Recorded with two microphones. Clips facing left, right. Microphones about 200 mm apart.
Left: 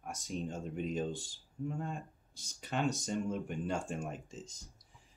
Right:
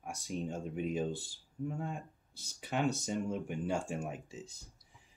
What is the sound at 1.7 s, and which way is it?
Speech, 10° right (ahead or behind).